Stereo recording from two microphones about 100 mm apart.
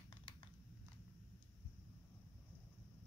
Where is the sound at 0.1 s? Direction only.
50° left (ahead or behind).